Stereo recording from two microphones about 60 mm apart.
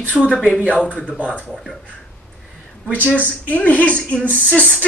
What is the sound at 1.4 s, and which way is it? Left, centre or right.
Speech, centre.